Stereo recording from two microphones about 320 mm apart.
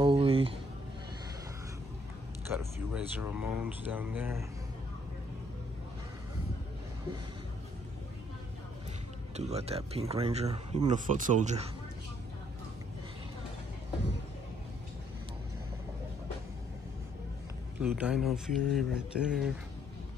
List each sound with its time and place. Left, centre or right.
0.0 s a sound: centre
2.5 s speech: centre
9.4 s speech: centre
17.7 s speech: centre